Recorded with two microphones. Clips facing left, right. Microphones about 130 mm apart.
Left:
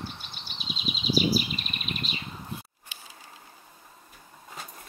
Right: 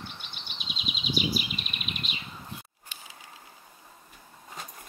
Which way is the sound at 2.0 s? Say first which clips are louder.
Left 3 dB; 35° left (ahead or behind).